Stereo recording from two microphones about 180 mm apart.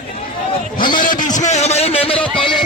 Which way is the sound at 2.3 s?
30° left (ahead or behind).